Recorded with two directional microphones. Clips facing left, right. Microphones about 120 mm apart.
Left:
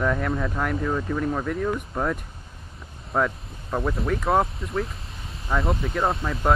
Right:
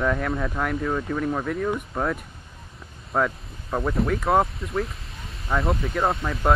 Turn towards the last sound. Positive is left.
turn(degrees=0)  # may be behind; listen again after turning